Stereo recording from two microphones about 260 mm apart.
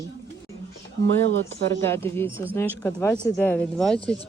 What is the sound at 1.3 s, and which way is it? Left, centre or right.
Speech, right.